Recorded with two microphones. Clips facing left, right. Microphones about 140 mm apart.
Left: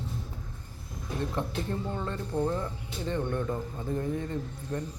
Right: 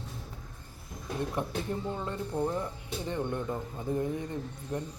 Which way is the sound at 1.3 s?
15° right (ahead or behind).